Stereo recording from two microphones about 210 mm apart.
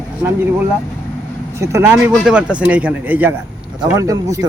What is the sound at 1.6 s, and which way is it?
Speech, 10° right (ahead or behind).